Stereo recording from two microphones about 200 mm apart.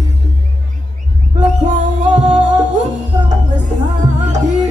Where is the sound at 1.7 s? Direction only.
35° right (ahead or behind).